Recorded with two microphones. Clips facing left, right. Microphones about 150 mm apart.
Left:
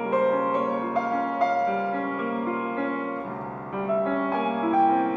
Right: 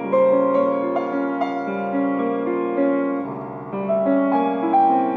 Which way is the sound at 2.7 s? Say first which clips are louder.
Right 9 dB; 35° right (ahead or behind).